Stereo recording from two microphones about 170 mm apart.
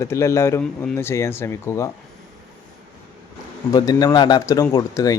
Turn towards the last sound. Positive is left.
turn(degrees=20)  # may be behind; listen again after turning